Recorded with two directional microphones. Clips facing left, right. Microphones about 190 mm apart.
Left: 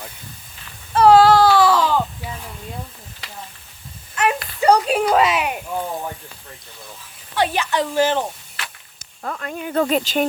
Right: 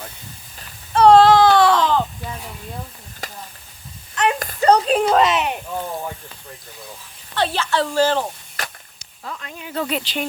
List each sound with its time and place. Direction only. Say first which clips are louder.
0.9 s baby cry: right 1 dB; 5° left (ahead or behind)
3.2 s a sound: right 6 dB; 45° right (ahead or behind)
4.6 s speech: right 1 dB; 10° left (ahead or behind)
7.3 s speech: left 1 dB; 15° left (ahead or behind)
8.6 s whip: right 4 dB; 40° right (ahead or behind)
9.0 s speech: left 5 dB; 50° left (ahead or behind)